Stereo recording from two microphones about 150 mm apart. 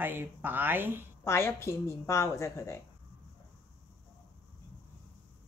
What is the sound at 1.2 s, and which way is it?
A woman's voice, 15° left (ahead or behind).